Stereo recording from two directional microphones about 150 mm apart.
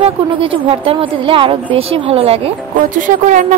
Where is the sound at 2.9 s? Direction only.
60° right (ahead or behind).